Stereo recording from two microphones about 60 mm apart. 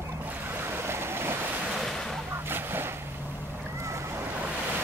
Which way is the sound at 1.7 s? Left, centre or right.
Centre.